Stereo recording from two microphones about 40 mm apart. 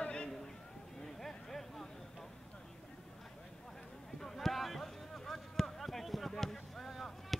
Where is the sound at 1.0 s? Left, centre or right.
Centre.